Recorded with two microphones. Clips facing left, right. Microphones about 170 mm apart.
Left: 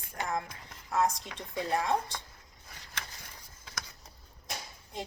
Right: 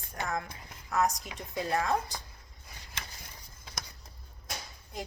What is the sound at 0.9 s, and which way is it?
Speech, 25° left (ahead or behind).